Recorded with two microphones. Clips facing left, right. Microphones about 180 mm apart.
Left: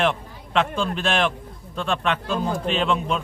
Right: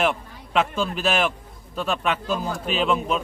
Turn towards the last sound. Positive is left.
turn(degrees=-5)  # may be behind; listen again after turning